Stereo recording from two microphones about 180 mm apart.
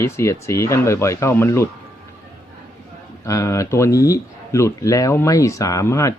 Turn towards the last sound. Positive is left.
turn(degrees=15)  # may be behind; listen again after turning